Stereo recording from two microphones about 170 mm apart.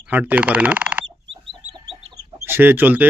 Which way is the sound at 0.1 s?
10° right (ahead or behind).